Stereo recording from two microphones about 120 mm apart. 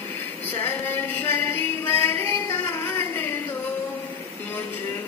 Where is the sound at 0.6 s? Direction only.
15° left (ahead or behind).